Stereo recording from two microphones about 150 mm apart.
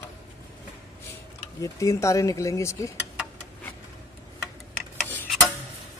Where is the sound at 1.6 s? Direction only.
20° left (ahead or behind).